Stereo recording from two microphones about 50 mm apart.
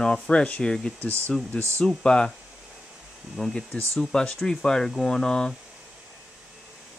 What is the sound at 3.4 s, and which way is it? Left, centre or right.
Speech, centre.